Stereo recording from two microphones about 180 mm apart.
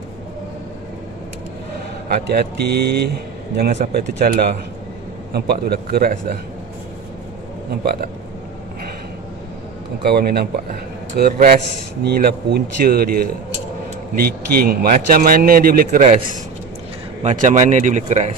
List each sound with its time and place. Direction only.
2.2 s a man's voice: 60° right (ahead or behind)
3.7 s speech: 45° right (ahead or behind)
5.3 s a man's voice: 60° right (ahead or behind)
10.0 s a man's voice: 60° right (ahead or behind)
14.2 s a man's voice: 55° right (ahead or behind); by 18.3 s 40° right (ahead or behind)